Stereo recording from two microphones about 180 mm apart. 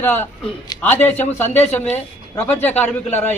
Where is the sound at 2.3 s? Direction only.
10° left (ahead or behind).